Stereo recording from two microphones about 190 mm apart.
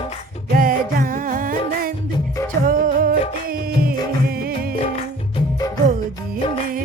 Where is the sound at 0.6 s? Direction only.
45° right (ahead or behind).